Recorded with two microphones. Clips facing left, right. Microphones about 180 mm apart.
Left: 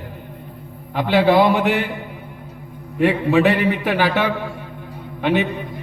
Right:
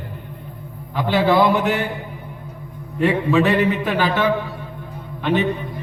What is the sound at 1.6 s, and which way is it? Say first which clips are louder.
Speech: left 2 dB; 45° right (ahead or behind).